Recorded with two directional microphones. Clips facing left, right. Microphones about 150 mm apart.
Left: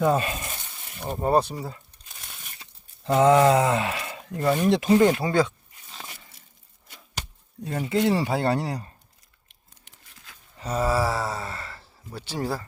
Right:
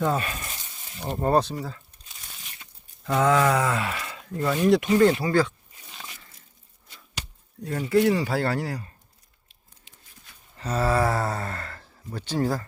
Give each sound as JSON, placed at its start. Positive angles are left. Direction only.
{"t": 0.0, "sound": "speech", "side_deg": 20}
{"t": 1.0, "sound": "mantra", "side_deg": 10}
{"t": 1.5, "sound": "speech", "side_deg": 20}
{"t": 2.6, "sound": "a sound", "side_deg": 20}
{"t": 4.3, "sound": "speech", "side_deg": 25}
{"t": 7.6, "sound": "speech", "side_deg": 20}
{"t": 10.6, "sound": "mantra", "side_deg": 10}